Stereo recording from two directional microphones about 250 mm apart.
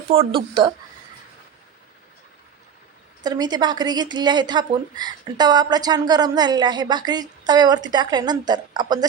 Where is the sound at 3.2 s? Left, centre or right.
Centre.